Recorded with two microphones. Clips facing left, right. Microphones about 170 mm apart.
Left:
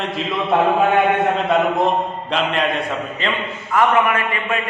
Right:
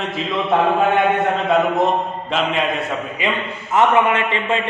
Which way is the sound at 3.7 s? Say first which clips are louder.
Right 1 dB; 25° right (ahead or behind).